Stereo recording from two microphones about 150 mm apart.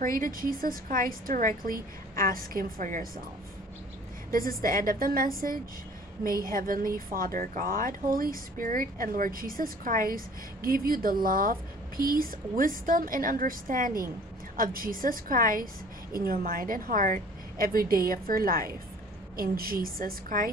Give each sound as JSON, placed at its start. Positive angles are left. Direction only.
{"t": 0.0, "sound": "speech", "side_deg": -65}
{"t": 4.3, "sound": "speech", "side_deg": -70}